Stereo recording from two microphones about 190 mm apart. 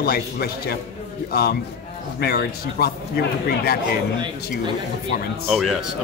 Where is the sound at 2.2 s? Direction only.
55° left (ahead or behind).